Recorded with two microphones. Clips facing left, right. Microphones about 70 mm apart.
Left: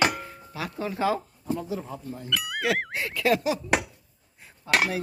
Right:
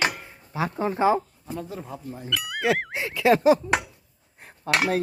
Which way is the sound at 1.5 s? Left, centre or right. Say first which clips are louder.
Left 3 dB; centre.